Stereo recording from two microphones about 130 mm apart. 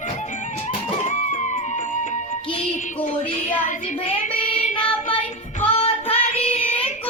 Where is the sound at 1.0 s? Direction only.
65° left (ahead or behind).